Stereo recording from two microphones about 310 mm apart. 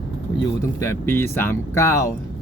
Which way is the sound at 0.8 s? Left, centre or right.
Centre.